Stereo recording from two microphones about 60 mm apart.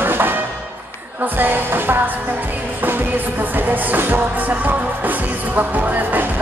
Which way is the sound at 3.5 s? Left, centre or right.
Right.